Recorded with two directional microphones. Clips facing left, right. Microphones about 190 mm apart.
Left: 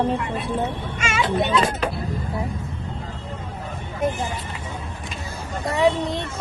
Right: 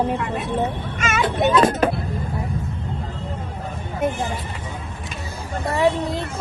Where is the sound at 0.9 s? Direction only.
50° right (ahead or behind).